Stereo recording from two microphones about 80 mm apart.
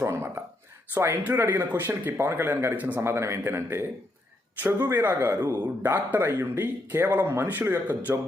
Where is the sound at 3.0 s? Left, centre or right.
Right.